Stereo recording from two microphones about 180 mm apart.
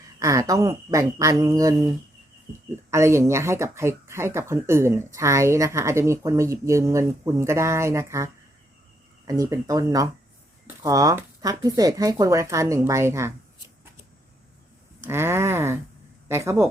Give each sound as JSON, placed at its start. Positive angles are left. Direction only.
{"t": 0.2, "sound": "speech", "side_deg": -15}
{"t": 2.9, "sound": "speech", "side_deg": -15}
{"t": 15.0, "sound": "speech", "side_deg": -15}